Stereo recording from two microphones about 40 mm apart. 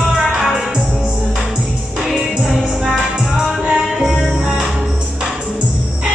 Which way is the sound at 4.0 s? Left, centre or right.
Centre.